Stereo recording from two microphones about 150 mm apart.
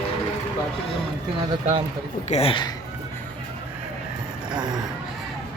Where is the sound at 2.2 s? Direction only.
45° left (ahead or behind).